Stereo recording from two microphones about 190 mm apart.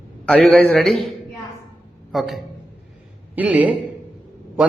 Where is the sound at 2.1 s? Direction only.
Centre (ahead or behind).